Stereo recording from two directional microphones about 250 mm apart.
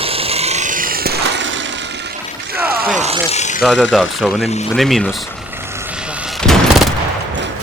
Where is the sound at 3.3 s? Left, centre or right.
Left.